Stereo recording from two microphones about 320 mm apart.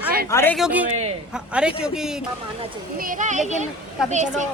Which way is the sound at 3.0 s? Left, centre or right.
Right.